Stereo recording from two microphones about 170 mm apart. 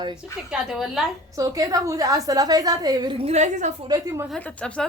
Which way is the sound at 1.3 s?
20° right (ahead or behind).